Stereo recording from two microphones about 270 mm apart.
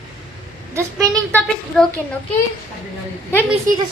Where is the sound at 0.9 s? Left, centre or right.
Centre.